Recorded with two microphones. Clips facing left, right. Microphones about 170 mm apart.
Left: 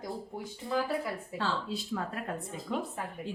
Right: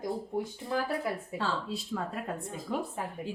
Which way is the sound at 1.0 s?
25° right (ahead or behind).